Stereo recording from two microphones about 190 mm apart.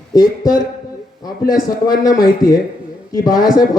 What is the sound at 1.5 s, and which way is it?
Speech, 50° left (ahead or behind).